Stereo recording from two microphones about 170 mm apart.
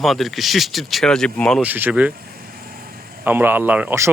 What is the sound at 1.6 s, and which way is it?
Speech, 10° right (ahead or behind).